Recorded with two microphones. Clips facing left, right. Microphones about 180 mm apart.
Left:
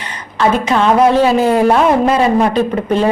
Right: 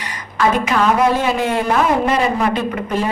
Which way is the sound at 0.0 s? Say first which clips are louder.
Left 3 dB; 30° left (ahead or behind).